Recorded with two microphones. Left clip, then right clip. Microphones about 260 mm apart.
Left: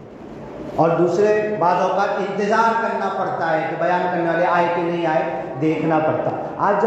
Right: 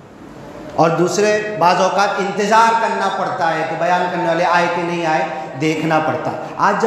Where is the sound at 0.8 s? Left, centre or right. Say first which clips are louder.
Right 2 dB; right.